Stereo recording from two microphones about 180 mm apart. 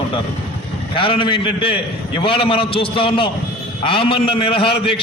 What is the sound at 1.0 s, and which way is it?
A man's voice, 30° left (ahead or behind).